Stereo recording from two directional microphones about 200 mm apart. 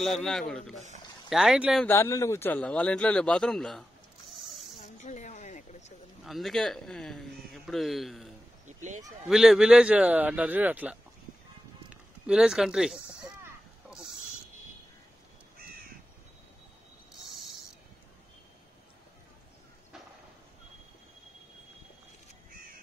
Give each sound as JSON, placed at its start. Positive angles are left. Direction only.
{"t": 0.0, "sound": "a man's voice", "side_deg": 0}
{"t": 1.9, "sound": "a man's voice", "side_deg": 15}
{"t": 4.4, "sound": "snake", "side_deg": 0}
{"t": 4.8, "sound": "a sound", "side_deg": 35}
{"t": 6.2, "sound": "speech", "side_deg": 0}
{"t": 8.6, "sound": "a sound", "side_deg": -40}
{"t": 9.3, "sound": "a man's voice", "side_deg": 0}